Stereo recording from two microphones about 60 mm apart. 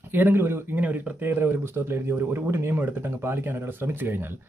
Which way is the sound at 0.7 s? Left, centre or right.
Right.